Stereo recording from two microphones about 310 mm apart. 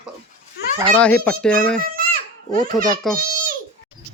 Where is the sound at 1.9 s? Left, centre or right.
Right.